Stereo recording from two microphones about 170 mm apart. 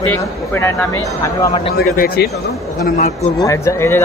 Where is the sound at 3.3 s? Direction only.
20° left (ahead or behind).